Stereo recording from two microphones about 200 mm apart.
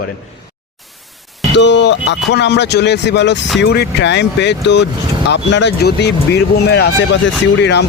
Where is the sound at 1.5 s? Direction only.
60° left (ahead or behind).